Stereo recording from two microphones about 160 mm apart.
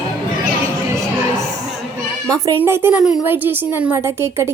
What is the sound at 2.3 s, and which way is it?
A woman's voice, 20° right (ahead or behind).